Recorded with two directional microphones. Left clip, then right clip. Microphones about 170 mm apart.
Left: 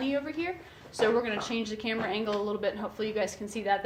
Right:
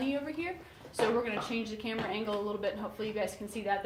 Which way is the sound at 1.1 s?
25° left (ahead or behind).